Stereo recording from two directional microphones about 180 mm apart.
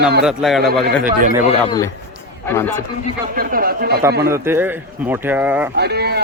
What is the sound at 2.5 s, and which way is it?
Speech, 15° left (ahead or behind).